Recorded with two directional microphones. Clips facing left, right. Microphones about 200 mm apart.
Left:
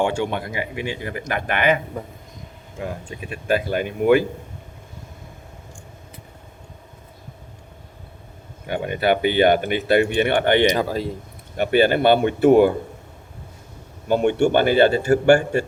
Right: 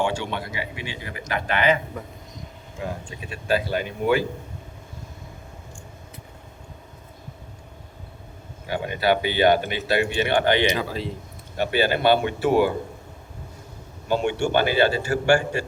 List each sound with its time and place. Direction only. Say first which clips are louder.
0.0 s speech: left 4 dB; 50° left (ahead or behind)
3.2 s speech: left 2 dB; 50° left (ahead or behind)
8.7 s speech: left 2 dB; 55° left (ahead or behind)
10.7 s speech: left 4 dB; 45° left (ahead or behind)
14.1 s speech: left 5 dB; 55° left (ahead or behind)